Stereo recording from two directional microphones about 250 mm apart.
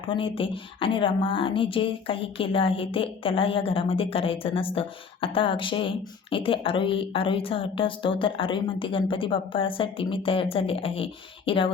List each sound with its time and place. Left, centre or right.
0.0 s speech: left